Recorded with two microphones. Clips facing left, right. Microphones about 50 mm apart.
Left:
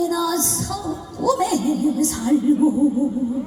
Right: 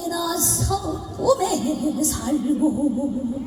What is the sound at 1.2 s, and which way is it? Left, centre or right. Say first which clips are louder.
Speech: even; left.